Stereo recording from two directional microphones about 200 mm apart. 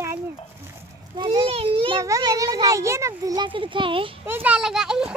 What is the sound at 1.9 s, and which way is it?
A child's voice, 15° right (ahead or behind).